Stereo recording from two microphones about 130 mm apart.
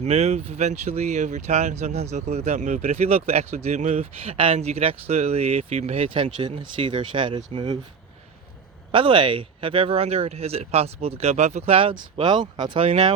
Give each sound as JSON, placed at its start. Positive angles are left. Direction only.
{"t": 0.0, "sound": "speech", "side_deg": -55}
{"t": 6.1, "sound": "speech", "side_deg": -40}
{"t": 8.9, "sound": "speech", "side_deg": -40}